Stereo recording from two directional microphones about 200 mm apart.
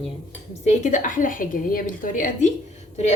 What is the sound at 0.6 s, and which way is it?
A woman's voice, 35° left (ahead or behind).